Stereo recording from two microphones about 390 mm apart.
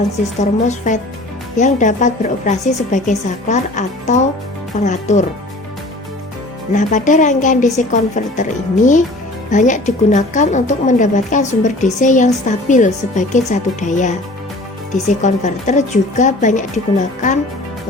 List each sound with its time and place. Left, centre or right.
0.3 s a woman's voice: centre
6.7 s a woman's voice: centre
15.2 s a woman's voice: centre